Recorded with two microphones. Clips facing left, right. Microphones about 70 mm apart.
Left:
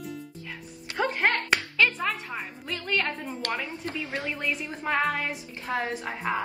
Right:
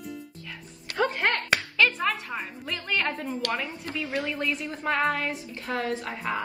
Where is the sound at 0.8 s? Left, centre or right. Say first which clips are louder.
Even; left.